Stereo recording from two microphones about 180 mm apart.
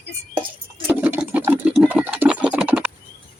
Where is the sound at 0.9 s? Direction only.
10° right (ahead or behind).